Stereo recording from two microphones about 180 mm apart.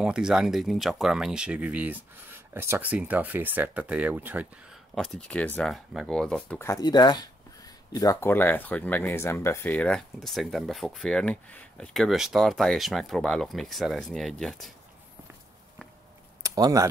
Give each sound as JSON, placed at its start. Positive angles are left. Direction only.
{"t": 0.0, "sound": "speech", "side_deg": -5}
{"t": 4.9, "sound": "speech", "side_deg": 5}
{"t": 16.4, "sound": "speech", "side_deg": -20}